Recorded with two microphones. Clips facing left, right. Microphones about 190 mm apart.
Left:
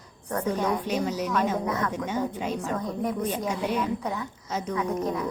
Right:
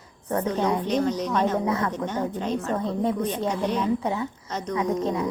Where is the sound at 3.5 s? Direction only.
10° left (ahead or behind).